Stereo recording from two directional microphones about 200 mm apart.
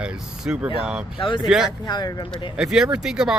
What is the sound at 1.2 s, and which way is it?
Speech, 25° left (ahead or behind).